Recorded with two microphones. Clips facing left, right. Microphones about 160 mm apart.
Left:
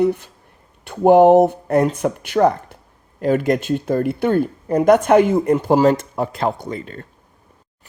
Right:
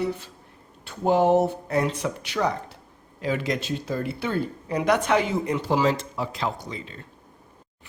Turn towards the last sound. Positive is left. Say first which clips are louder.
# left 8 dB
turn(degrees=50)  # may be behind; listen again after turning